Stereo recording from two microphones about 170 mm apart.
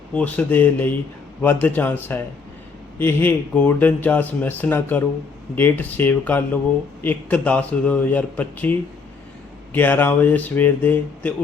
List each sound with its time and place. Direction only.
0.1 s speech: 10° left (ahead or behind)